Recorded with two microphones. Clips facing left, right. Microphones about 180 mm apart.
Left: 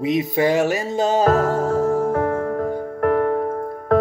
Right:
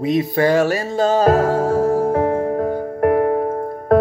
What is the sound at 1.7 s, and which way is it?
Music, 35° right (ahead or behind).